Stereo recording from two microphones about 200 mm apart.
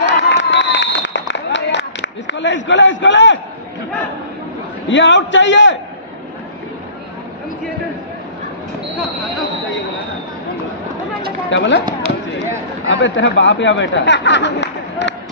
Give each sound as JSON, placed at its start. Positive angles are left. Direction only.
{"t": 0.0, "sound": "a sound", "side_deg": 65}
{"t": 4.8, "sound": "a man's voice", "side_deg": 65}
{"t": 11.5, "sound": "a man's voice", "side_deg": 65}
{"t": 12.9, "sound": "speech", "side_deg": 65}